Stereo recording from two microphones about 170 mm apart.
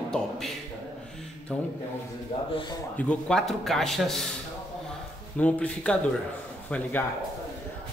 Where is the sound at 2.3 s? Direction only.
30° left (ahead or behind).